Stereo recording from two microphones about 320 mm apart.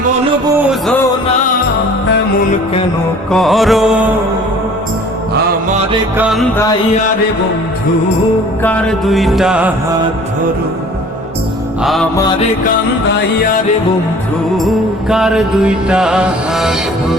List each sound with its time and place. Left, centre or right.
3.3 s music: centre
5.3 s mantra: right
6.1 s music: centre
8.6 s music: centre
11.8 s music: centre
14.6 s music: centre